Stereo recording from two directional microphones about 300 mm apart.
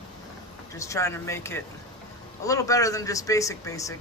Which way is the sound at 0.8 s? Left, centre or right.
Centre.